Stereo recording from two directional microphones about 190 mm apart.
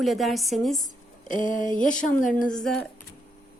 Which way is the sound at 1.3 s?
45° left (ahead or behind).